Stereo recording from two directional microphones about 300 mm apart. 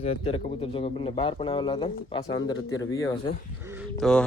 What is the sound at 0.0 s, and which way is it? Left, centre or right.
Speech, centre.